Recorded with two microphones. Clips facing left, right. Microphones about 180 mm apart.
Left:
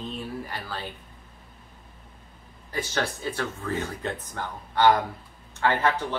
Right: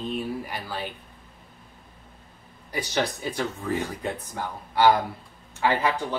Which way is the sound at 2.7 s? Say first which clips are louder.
Right 2 dB; 15° right (ahead or behind).